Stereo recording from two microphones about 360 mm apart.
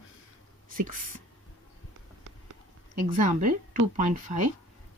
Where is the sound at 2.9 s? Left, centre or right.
Centre.